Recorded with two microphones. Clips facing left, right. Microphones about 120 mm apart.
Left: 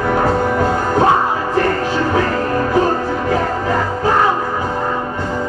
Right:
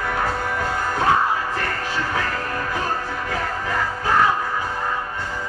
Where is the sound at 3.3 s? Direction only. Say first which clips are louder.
Left 6 dB; 30° left (ahead or behind).